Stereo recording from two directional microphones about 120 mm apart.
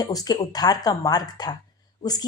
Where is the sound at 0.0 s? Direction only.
30° left (ahead or behind).